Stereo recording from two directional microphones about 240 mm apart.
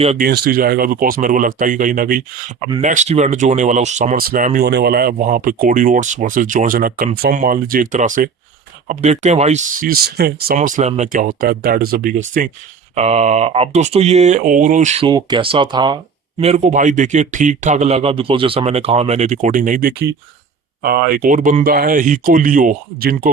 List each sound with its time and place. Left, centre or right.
0.0 s speech: right
0.3 s speech: right